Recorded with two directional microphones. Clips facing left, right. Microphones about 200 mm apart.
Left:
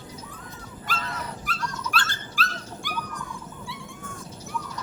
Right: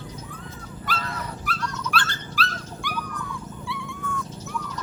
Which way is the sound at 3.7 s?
50° left (ahead or behind).